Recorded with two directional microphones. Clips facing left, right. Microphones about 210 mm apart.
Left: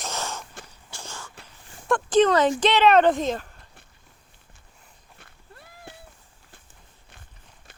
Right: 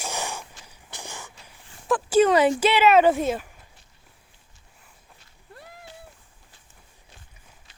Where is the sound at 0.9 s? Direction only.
15° right (ahead or behind).